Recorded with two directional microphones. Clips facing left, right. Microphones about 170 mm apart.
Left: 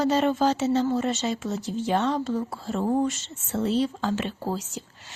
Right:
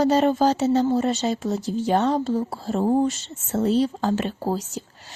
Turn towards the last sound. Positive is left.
turn(degrees=-40)  # may be behind; listen again after turning